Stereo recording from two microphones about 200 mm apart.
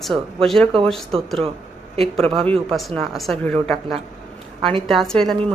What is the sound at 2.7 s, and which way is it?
A woman's voice, centre (ahead or behind).